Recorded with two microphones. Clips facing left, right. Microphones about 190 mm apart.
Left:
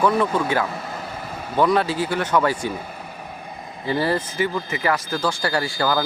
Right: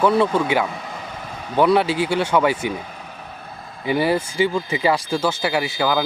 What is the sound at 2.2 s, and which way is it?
Speech, 10° right (ahead or behind).